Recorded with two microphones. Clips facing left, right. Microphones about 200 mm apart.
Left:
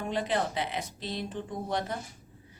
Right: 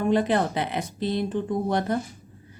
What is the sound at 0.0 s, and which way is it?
Speech, 55° right (ahead or behind).